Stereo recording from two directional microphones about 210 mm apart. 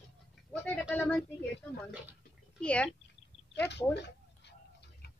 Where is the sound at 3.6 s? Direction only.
55° left (ahead or behind).